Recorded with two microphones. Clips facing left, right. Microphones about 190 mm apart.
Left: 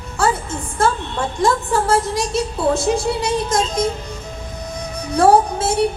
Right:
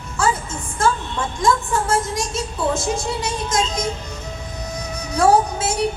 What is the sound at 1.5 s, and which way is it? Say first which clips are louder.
Music: right 3 dB; 35° left (ahead or behind).